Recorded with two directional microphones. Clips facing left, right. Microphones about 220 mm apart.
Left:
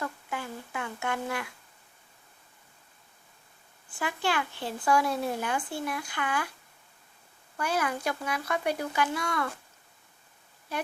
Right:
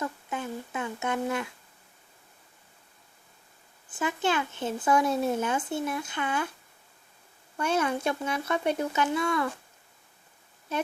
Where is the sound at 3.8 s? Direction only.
20° right (ahead or behind).